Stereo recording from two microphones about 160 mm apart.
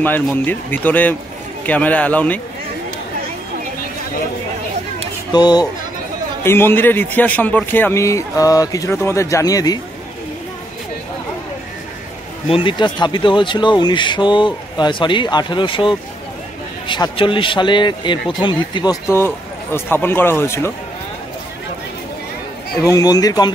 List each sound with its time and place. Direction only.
0.0 s a man's voice: 10° left (ahead or behind)
5.3 s speech: 25° left (ahead or behind)
6.4 s a man's voice: 15° left (ahead or behind)
12.4 s speech: 35° left (ahead or behind)
19.0 s a man's voice: 15° left (ahead or behind)
22.8 s speech: 25° left (ahead or behind)